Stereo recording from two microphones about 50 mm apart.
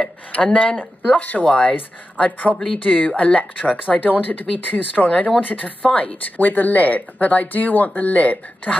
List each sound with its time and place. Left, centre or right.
0.3 s speech: left
2.5 s speech: centre
2.8 s speech: left